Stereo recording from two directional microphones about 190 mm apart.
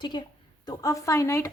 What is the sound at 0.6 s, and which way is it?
Speech, 20° left (ahead or behind).